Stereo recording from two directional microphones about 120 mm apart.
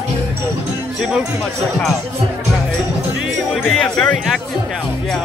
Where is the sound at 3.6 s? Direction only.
5° left (ahead or behind).